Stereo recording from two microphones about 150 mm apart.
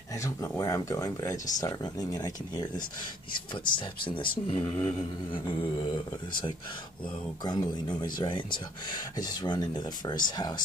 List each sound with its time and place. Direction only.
0.1 s speech: 20° left (ahead or behind)
7.4 s speech: 25° left (ahead or behind)